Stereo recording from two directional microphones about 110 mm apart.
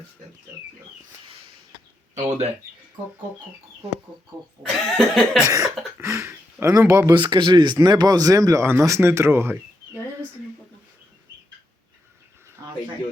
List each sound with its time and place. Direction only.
2.1 s speech: 90° right
4.6 s cough: 5° left (ahead or behind)
5.5 s speech: 30° right (ahead or behind)
6.0 s a sound: 25° right (ahead or behind)
7.1 s speech: 45° right (ahead or behind); by 9.6 s 20° right (ahead or behind)
12.6 s cricket: 30° right (ahead or behind)